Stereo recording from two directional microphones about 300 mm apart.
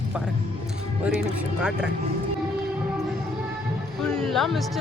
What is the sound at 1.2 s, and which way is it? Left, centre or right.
Speech, centre.